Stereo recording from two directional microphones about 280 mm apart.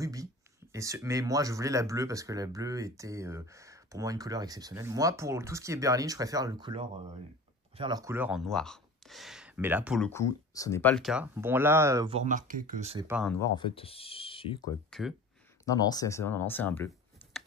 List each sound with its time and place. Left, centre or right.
0.0 s speech: centre
13.0 s speech: centre
13.3 s speech: centre
14.9 s speech: centre
15.6 s speech: centre